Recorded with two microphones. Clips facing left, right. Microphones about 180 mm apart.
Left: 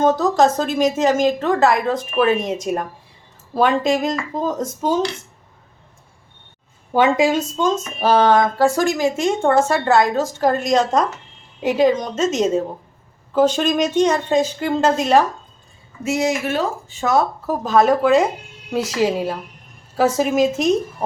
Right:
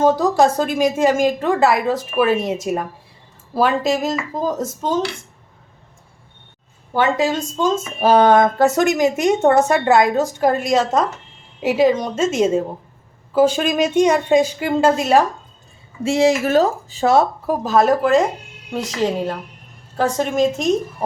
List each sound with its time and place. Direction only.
0.0 s speech: 10° right (ahead or behind)
6.9 s speech: 15° left (ahead or behind)
8.0 s speech: 15° right (ahead or behind)
16.0 s speech: 30° right (ahead or behind)
17.4 s speech: 10° right (ahead or behind)